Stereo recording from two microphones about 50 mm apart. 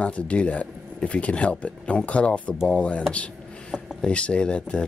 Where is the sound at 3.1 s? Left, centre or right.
Left.